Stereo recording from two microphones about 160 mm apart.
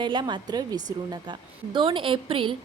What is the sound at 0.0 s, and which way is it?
A woman's voice, 30° right (ahead or behind).